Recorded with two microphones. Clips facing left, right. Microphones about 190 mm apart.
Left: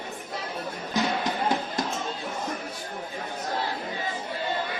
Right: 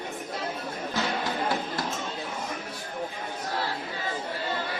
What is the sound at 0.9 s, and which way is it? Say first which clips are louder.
Music: left 4 dB; 15° left (ahead or behind).